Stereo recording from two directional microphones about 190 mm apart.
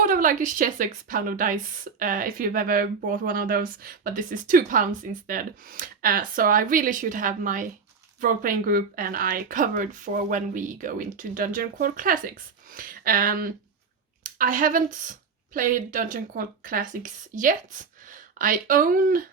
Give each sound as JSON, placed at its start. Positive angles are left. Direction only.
{"t": 0.0, "sound": "a woman's voice", "side_deg": -45}